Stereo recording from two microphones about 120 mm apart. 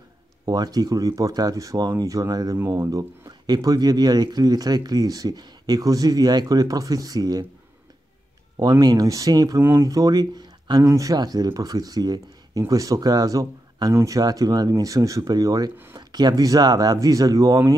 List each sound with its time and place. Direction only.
0.5 s speech: 35° right (ahead or behind)
8.5 s speech: 30° right (ahead or behind)